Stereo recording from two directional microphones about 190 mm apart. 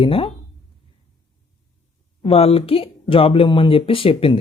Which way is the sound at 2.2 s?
30° left (ahead or behind).